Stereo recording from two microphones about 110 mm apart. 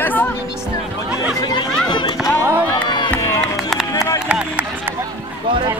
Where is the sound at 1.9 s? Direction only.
45° left (ahead or behind).